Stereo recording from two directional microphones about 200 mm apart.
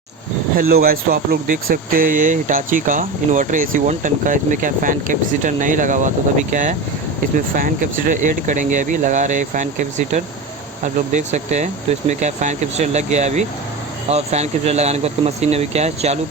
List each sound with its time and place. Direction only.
0.5 s speech: 45° right (ahead or behind)